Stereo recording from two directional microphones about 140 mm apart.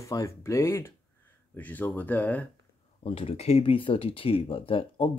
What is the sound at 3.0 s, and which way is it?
Speech, 45° left (ahead or behind).